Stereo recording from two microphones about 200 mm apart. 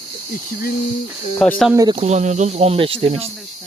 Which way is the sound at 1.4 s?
Centre (ahead or behind).